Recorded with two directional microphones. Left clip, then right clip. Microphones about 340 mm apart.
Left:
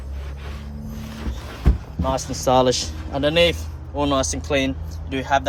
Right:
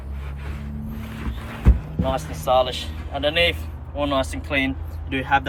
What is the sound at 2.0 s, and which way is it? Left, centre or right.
Speech, left.